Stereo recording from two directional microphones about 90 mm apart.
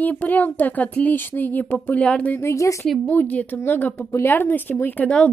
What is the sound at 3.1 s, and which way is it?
Speech, 20° left (ahead or behind).